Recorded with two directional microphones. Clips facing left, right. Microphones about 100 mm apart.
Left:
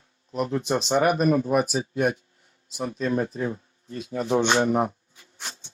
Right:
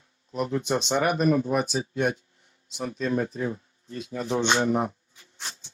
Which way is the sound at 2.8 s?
30° left (ahead or behind).